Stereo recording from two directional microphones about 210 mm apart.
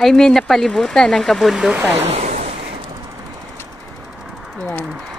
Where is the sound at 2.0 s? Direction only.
30° right (ahead or behind).